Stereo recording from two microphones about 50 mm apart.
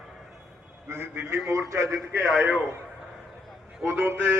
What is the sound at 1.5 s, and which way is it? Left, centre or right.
Speech, right.